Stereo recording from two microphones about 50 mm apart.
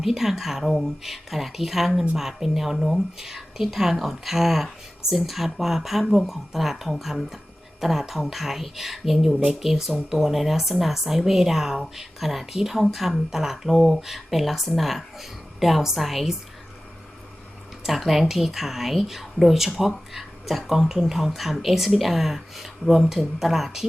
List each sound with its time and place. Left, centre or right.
0.0 s speech: centre
17.8 s speech: centre